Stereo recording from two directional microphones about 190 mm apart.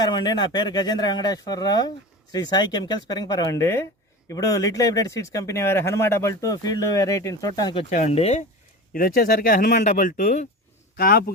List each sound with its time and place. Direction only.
0.0 s speech: 20° left (ahead or behind)
7.9 s speech: 35° left (ahead or behind)
8.9 s speech: 50° left (ahead or behind)